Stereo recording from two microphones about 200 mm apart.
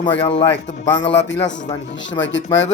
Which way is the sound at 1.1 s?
65° left (ahead or behind).